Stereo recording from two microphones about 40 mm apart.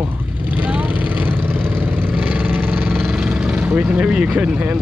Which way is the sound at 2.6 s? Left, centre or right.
Right.